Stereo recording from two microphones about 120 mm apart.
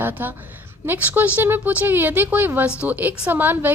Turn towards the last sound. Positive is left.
turn(degrees=-15)  # may be behind; listen again after turning